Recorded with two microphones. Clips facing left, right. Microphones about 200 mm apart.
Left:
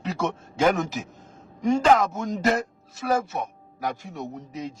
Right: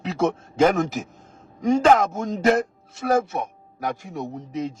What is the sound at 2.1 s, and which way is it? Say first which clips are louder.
Speech: right 4 dB; 50° right (ahead or behind).